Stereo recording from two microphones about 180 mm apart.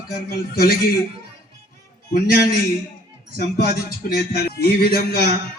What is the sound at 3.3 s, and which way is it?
Music, 60° left (ahead or behind).